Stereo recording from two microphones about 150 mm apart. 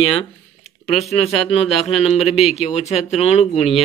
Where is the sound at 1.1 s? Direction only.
40° left (ahead or behind).